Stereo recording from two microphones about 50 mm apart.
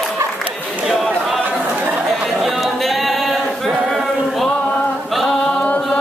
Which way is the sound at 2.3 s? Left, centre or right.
Centre.